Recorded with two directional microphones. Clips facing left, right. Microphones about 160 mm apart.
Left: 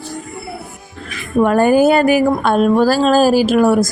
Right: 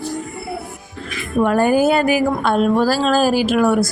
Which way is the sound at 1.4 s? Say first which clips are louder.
Left 3 dB; 50° left (ahead or behind).